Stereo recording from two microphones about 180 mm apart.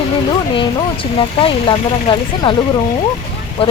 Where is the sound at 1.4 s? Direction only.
25° left (ahead or behind).